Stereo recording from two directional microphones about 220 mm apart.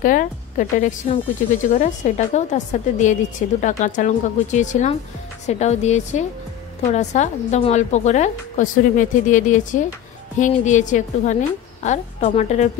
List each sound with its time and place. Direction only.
0.0 s a woman's voice: 35° left (ahead or behind)